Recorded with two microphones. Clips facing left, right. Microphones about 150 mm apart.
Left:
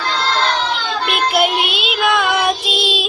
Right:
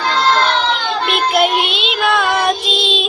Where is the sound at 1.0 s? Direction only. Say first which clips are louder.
Right 1 dB; centre (ahead or behind).